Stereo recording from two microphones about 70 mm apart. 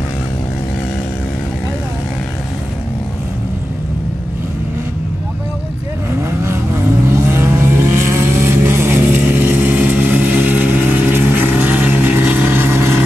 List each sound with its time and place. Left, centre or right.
6.4 s vehicle: right